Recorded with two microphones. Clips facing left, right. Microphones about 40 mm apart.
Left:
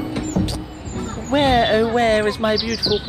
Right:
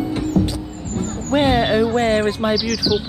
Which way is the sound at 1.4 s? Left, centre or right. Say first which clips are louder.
Left 1 dB; left.